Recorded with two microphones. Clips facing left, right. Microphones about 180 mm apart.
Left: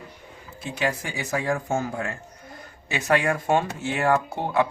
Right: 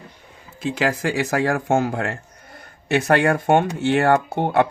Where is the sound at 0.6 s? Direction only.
90° right.